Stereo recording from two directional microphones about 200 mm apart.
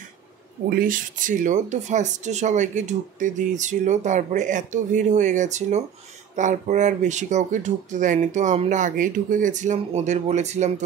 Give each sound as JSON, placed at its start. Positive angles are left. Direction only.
{"t": 0.7, "sound": "speech", "side_deg": -45}